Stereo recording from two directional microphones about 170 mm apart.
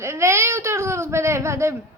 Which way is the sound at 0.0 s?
15° right (ahead or behind).